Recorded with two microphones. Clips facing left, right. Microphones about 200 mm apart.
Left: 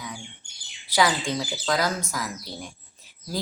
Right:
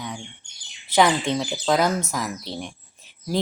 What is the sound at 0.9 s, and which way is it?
Speech, 25° right (ahead or behind).